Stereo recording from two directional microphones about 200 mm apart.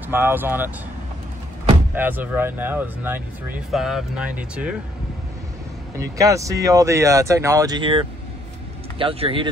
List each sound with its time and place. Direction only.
0.1 s speech: 10° right (ahead or behind)
2.0 s speech: 10° right (ahead or behind)
6.1 s speech: 15° right (ahead or behind)